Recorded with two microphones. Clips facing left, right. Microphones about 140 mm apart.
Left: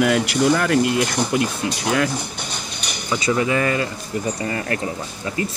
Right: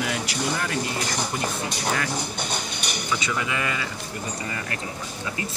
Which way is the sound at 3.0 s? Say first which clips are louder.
Left 9 dB; 35° left (ahead or behind).